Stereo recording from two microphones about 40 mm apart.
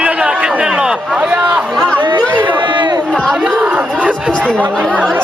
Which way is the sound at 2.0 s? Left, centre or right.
Right.